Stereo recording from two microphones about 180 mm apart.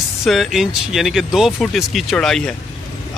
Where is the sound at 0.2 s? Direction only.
Centre (ahead or behind).